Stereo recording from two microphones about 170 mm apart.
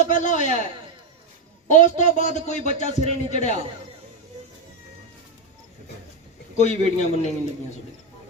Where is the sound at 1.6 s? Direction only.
45° left (ahead or behind).